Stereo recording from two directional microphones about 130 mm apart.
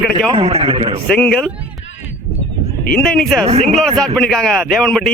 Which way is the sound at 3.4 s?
50° right (ahead or behind).